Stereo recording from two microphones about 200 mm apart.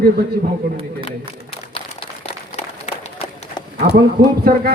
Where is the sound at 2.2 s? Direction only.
30° left (ahead or behind).